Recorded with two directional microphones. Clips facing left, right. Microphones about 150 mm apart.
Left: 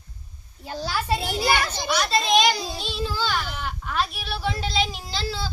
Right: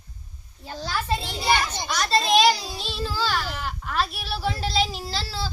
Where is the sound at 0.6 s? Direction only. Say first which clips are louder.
Left 2 dB; 10° left (ahead or behind).